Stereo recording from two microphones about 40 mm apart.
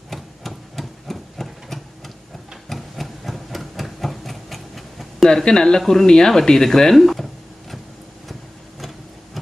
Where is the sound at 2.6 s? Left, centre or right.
Centre.